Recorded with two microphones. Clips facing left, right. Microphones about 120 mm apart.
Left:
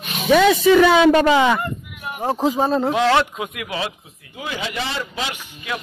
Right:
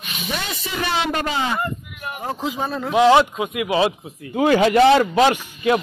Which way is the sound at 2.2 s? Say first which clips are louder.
Left 7 dB; 40° left (ahead or behind).